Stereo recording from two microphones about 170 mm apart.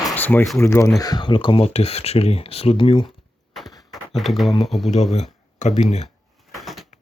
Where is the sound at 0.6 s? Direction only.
15° left (ahead or behind); by 3.1 s 30° left (ahead or behind).